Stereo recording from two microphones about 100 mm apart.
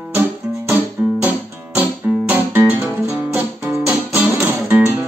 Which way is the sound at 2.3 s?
20° right (ahead or behind).